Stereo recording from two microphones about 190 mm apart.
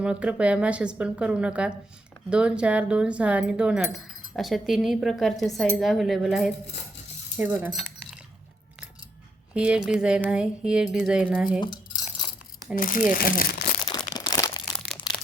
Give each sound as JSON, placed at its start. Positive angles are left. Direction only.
{"t": 0.0, "sound": "speech", "side_deg": -5}
{"t": 9.6, "sound": "speech", "side_deg": -5}
{"t": 12.7, "sound": "speech", "side_deg": 45}
{"t": 13.8, "sound": "crunch", "side_deg": 20}